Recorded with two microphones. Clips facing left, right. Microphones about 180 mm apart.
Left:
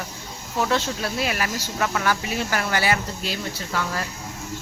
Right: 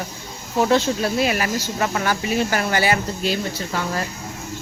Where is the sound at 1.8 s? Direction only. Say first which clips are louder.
Even; 25° right (ahead or behind).